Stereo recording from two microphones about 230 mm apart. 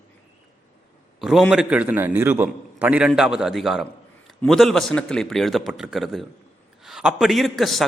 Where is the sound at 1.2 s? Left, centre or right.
Centre.